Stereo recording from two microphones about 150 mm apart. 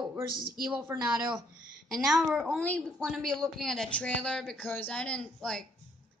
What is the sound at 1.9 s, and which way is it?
Speech, centre (ahead or behind).